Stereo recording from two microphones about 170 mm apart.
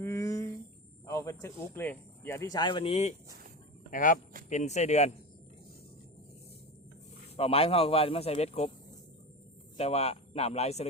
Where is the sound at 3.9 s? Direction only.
50° left (ahead or behind).